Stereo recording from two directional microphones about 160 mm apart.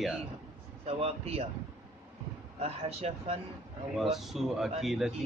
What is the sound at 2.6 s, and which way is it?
Speech, 40° right (ahead or behind).